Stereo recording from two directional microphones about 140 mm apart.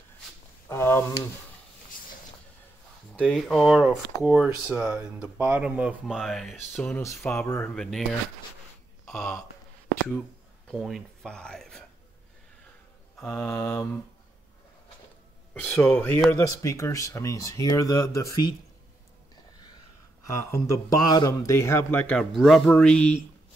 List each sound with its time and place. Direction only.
0.7 s speech: 15° left (ahead or behind)
3.2 s speech: 5° left (ahead or behind)
7.2 s speech: 15° left (ahead or behind)
7.7 s speech: 5° left (ahead or behind)
9.0 s speech: 5° left (ahead or behind)
10.7 s speech: centre (ahead or behind)
13.2 s speech: 5° left (ahead or behind)
13.5 s speech: 25° left (ahead or behind)
15.9 s speech: 10° left (ahead or behind)
16.3 s speech: 20° left (ahead or behind)
20.2 s speech: 20° left (ahead or behind)
22.1 s speech: centre (ahead or behind)